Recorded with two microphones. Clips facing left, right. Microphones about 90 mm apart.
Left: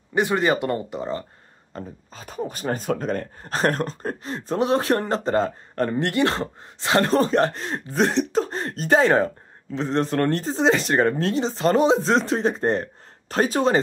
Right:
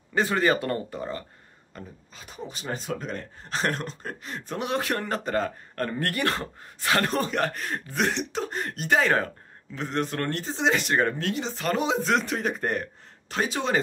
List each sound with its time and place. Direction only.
0.1 s speech: 15° left (ahead or behind)
1.7 s a man's voice: 35° left (ahead or behind)